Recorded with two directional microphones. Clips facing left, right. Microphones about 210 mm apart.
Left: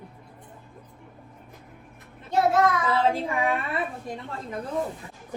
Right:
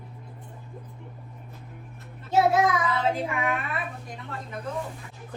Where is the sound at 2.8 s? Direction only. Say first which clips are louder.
Left 2 dB; 30° left (ahead or behind).